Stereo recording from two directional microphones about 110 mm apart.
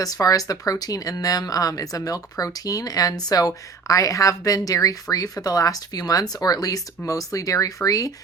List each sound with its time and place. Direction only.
0.0 s speech: 35° left (ahead or behind)